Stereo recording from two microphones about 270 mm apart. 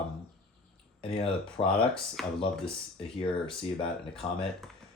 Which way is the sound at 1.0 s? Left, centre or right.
Left.